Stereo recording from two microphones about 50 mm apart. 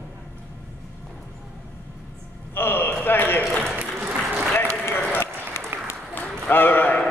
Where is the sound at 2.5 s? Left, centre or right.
Left.